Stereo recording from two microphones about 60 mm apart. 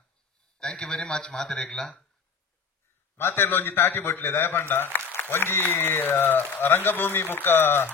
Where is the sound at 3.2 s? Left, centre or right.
Left.